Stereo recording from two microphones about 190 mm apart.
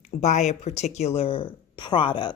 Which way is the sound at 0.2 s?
40° left (ahead or behind).